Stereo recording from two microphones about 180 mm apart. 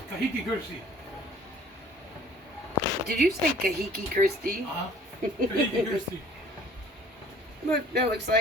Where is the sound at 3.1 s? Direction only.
60° right (ahead or behind).